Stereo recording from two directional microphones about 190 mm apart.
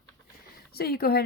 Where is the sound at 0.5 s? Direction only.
55° left (ahead or behind).